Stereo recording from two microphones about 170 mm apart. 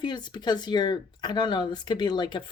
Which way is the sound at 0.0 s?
25° left (ahead or behind).